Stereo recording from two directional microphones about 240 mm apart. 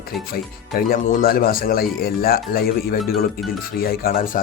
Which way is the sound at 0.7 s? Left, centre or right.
Left.